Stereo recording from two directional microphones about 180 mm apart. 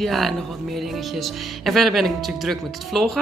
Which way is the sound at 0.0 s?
Centre (ahead or behind).